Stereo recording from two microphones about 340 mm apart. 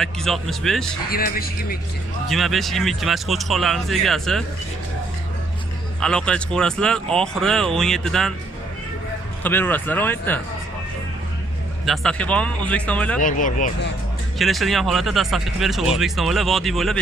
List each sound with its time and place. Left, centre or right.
0.0 s speech: centre
1.1 s speech: left
2.2 s speech: centre
5.9 s speech: centre
9.4 s speech: centre
11.8 s speech: centre
13.2 s speech: left
14.4 s speech: centre